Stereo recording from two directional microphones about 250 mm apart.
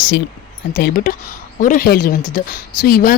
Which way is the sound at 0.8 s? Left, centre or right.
Left.